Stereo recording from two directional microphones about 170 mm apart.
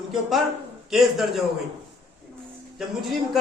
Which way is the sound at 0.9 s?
Centre (ahead or behind).